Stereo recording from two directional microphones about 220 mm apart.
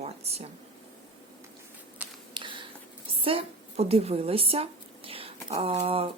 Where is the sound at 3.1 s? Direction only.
25° right (ahead or behind).